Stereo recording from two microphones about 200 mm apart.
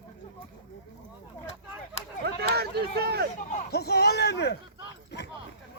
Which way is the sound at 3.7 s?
55° left (ahead or behind).